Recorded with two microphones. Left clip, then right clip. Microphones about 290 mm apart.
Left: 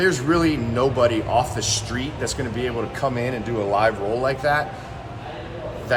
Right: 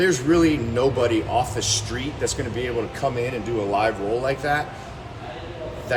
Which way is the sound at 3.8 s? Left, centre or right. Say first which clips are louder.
Left 3 dB; centre.